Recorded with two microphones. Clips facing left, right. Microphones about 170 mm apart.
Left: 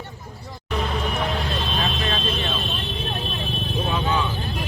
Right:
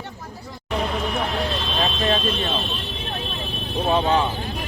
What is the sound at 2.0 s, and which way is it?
Vehicle, 40° right (ahead or behind).